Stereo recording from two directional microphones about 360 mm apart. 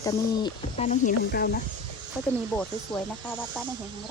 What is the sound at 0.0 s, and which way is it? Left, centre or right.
Speech, centre.